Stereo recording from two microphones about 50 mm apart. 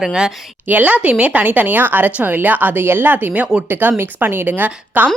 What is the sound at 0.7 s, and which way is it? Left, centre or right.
Speech, right.